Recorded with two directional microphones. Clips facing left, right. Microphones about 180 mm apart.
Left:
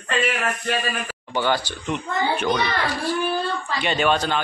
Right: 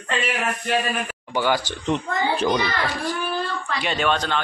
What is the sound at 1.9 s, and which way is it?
Speech, 35° right (ahead or behind).